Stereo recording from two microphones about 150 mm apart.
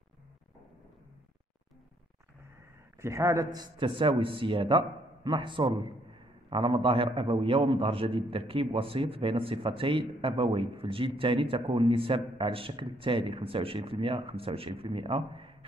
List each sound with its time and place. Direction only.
3.0 s a man's voice: 20° right (ahead or behind); by 15.5 s 35° right (ahead or behind)